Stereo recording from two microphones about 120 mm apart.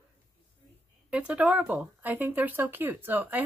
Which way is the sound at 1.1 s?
10° right (ahead or behind).